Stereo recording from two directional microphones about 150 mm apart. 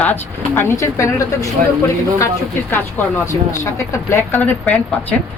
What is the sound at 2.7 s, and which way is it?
Speech, 15° left (ahead or behind).